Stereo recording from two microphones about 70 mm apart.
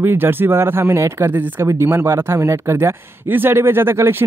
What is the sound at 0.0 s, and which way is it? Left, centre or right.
Speech, right.